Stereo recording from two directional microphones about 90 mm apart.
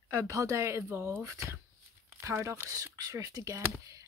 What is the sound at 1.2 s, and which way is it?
Speech, 35° right (ahead or behind).